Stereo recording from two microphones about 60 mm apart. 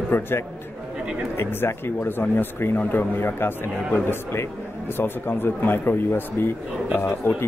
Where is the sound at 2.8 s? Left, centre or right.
Left.